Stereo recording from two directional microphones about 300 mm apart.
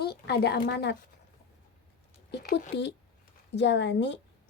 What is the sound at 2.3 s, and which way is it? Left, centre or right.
Speech, left.